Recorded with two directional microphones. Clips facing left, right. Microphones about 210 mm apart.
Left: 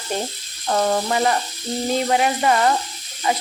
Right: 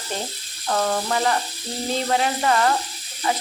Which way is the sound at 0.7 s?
25° left (ahead or behind).